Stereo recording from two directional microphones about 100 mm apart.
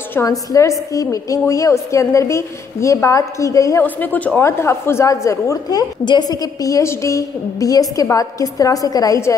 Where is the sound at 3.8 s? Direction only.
15° left (ahead or behind).